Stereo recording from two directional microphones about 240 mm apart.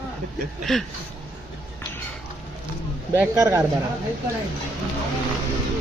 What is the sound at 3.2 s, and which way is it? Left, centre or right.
Speech, centre.